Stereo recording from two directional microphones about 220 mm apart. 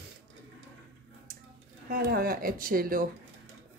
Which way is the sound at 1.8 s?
45° right (ahead or behind).